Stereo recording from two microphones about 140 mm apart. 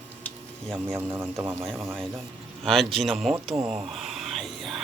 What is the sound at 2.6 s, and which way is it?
Speech, centre (ahead or behind).